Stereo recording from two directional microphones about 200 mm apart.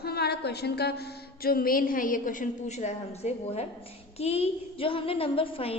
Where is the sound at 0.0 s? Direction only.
55° left (ahead or behind).